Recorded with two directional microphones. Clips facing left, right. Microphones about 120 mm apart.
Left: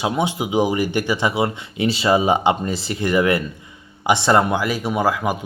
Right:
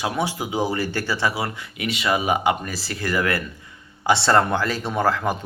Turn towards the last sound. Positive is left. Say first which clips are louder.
# left 2 dB
turn(degrees=10)  # may be behind; listen again after turning